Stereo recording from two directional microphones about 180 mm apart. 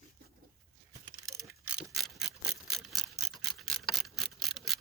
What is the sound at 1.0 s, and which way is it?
Keys jangling, 15° right (ahead or behind).